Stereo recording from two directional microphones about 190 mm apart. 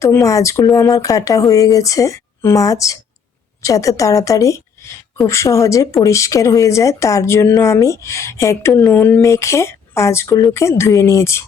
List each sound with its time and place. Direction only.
0.0 s a woman's voice: 15° left (ahead or behind)